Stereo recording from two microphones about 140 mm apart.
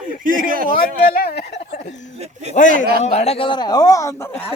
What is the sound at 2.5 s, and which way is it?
Speech, 65° left (ahead or behind).